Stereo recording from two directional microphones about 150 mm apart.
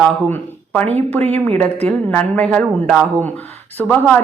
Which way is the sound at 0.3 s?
10° left (ahead or behind).